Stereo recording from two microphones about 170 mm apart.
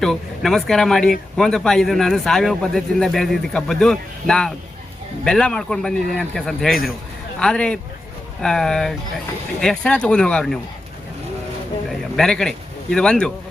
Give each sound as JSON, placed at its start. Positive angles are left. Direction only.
{"t": 0.0, "sound": "speech", "side_deg": 0}
{"t": 11.9, "sound": "speech", "side_deg": 5}